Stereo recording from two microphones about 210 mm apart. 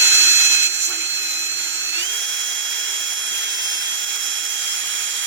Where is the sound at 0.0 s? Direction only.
65° right (ahead or behind).